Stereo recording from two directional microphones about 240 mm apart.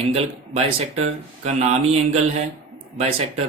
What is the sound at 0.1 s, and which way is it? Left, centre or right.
Speech, right.